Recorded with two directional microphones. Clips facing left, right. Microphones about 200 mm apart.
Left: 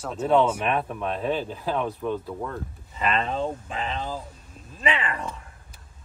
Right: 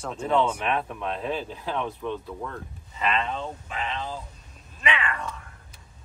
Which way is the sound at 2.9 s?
40° left (ahead or behind).